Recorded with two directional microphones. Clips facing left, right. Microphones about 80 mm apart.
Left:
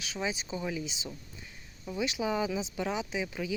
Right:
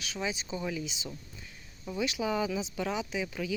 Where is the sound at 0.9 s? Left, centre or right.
Left.